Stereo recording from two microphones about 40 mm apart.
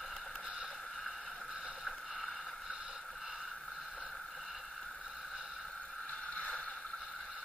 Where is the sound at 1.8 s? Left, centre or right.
Centre.